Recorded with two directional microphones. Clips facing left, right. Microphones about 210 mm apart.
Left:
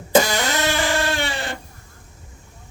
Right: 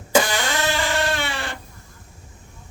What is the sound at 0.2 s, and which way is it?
Music, 40° left (ahead or behind).